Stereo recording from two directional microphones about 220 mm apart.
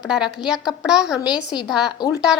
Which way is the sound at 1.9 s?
15° left (ahead or behind).